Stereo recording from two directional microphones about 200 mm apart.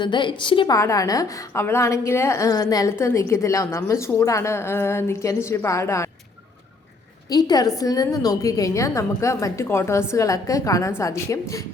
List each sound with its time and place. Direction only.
0.0 s a woman's voice: 25° left (ahead or behind)
7.3 s a woman's voice: 20° left (ahead or behind)